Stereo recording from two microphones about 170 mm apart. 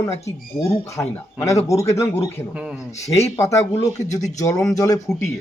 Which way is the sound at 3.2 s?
15° left (ahead or behind).